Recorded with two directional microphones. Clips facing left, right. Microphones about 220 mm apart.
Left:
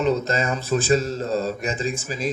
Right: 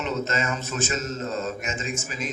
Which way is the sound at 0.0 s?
35° left (ahead or behind).